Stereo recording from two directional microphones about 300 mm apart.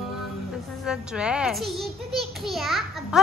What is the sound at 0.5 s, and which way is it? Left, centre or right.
A child's voice, centre.